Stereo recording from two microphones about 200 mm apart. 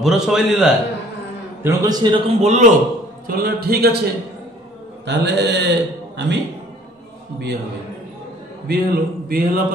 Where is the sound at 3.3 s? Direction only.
50° right (ahead or behind).